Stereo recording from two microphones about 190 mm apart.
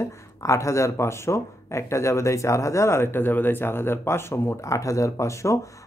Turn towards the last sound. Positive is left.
turn(degrees=15)  # may be behind; listen again after turning